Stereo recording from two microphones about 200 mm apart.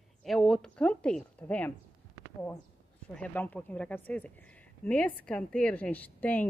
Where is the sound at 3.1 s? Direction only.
5° left (ahead or behind).